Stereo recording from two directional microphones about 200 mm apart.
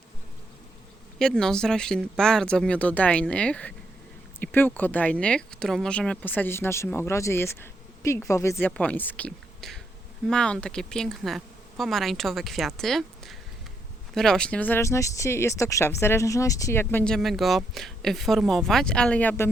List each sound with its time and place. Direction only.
1.2 s speech: 5° left (ahead or behind)